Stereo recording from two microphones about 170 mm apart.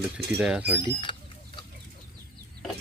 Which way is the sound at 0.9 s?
30° left (ahead or behind).